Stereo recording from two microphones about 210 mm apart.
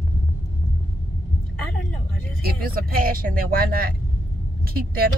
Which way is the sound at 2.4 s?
45° right (ahead or behind).